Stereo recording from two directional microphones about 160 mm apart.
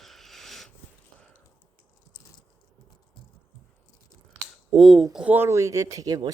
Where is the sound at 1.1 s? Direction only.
5° left (ahead or behind).